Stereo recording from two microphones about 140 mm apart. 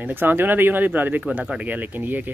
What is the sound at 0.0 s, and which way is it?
Speech, 15° right (ahead or behind).